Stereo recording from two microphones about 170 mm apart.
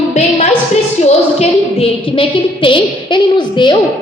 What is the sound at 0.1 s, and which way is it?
A woman's voice, 40° left (ahead or behind).